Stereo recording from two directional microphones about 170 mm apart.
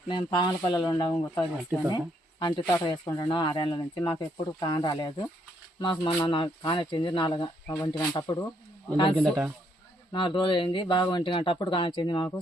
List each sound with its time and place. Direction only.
0.1 s speech: 25° left (ahead or behind)
9.1 s speech: centre (ahead or behind)
10.1 s speech: 30° left (ahead or behind)